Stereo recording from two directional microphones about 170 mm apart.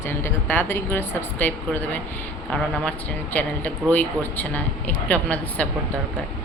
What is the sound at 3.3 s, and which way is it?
Speech, 10° left (ahead or behind).